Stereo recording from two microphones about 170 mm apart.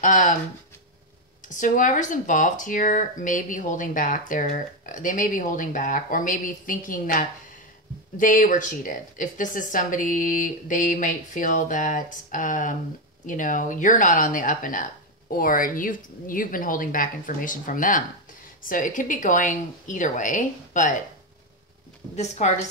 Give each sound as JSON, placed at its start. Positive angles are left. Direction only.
{"t": 0.0, "sound": "speech", "side_deg": 50}
{"t": 1.6, "sound": "speech", "side_deg": 50}
{"t": 22.1, "sound": "a woman's voice", "side_deg": 40}